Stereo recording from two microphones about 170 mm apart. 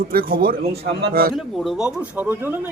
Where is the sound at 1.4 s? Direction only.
Centre (ahead or behind).